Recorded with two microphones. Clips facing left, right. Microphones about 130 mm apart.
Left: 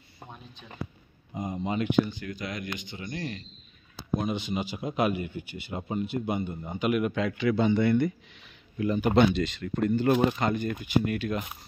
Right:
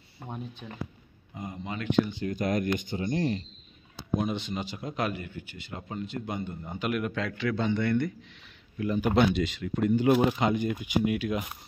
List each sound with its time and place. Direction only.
0.2 s a sound: 15° left (ahead or behind)
0.6 s speech: 45° right (ahead or behind)
1.3 s speech: 20° left (ahead or behind)
2.2 s speech: 45° right (ahead or behind)
3.0 s speech: 30° right (ahead or behind)
4.2 s a man's voice: 5° left (ahead or behind)
8.7 s speech: 5° right (ahead or behind)